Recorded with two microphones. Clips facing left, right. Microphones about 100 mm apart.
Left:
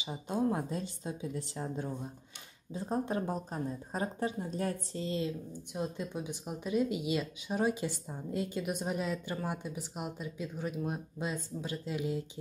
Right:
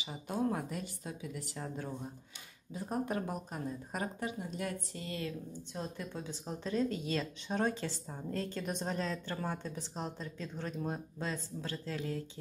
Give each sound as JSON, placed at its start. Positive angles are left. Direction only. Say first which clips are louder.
{"t": 0.0, "sound": "speech", "louder": "left 3 dB", "side_deg": 25}
{"t": 4.9, "sound": "speech", "louder": "left 5 dB", "side_deg": 25}